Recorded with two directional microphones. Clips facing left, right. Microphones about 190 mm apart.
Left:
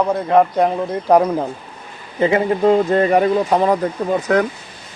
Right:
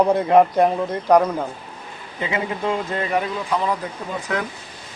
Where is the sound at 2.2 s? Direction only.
45° left (ahead or behind).